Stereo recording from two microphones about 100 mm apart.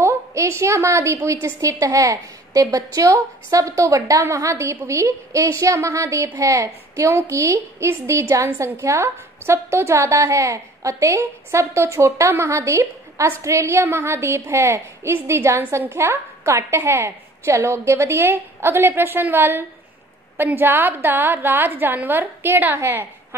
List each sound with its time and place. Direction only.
0.0 s a woman's voice: 30° right (ahead or behind)